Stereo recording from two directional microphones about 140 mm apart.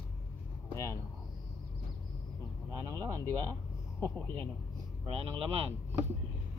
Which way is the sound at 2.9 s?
25° right (ahead or behind).